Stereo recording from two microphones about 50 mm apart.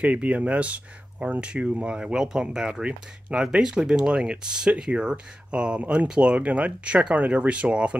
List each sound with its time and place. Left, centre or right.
0.0 s speech: right